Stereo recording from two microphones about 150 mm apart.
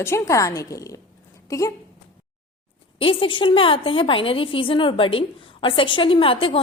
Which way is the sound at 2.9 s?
35° left (ahead or behind).